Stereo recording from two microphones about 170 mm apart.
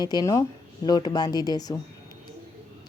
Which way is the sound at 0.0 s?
25° left (ahead or behind).